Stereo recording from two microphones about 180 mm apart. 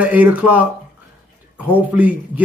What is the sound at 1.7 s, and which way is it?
Speech, 10° right (ahead or behind).